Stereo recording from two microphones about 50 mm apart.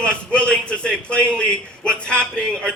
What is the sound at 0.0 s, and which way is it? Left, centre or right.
A man's voice, left.